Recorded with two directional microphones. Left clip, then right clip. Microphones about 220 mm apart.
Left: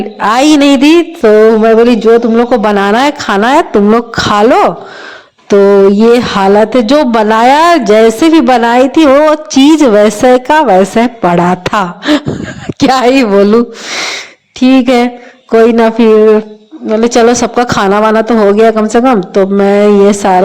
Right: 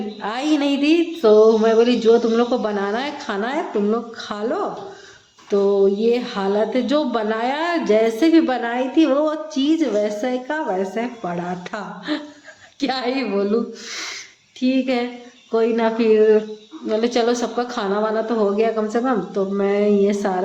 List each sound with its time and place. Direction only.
0.2 s a woman's voice: 45° left (ahead or behind)
6.0 s a woman's voice: 45° left (ahead or behind)